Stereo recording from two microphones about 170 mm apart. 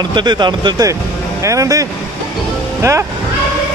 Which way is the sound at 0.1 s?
25° right (ahead or behind).